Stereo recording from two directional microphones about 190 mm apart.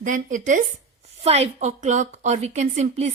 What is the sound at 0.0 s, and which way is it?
A woman's voice, 40° right (ahead or behind).